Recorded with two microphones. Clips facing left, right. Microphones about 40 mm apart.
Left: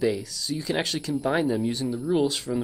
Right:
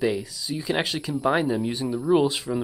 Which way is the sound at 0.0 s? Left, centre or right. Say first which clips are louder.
Even; centre.